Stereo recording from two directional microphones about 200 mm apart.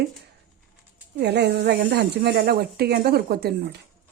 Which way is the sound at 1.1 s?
55° right (ahead or behind).